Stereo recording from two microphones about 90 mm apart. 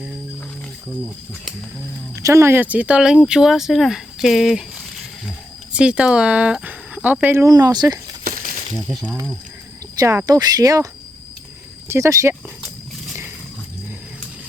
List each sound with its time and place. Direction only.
2.1 s speech: 30° right (ahead or behind); by 4.6 s 5° right (ahead or behind)
5.7 s speech: 10° right (ahead or behind)
7.3 s speech: 40° right (ahead or behind)
8.9 s speech: centre (ahead or behind)
10.2 s speech: 45° right (ahead or behind)
11.9 s speech: 35° right (ahead or behind)